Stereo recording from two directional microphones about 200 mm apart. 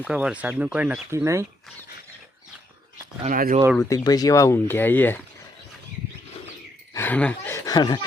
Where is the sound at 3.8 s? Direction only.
15° left (ahead or behind).